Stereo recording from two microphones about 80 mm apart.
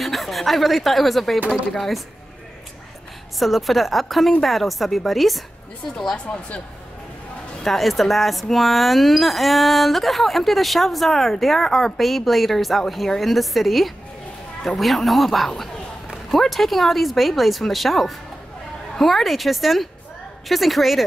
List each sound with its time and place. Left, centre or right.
0.0 s speech: centre
3.3 s speech: centre
7.6 s speech: centre